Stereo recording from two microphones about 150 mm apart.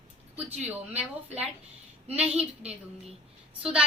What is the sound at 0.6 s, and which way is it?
Speech, 45° right (ahead or behind).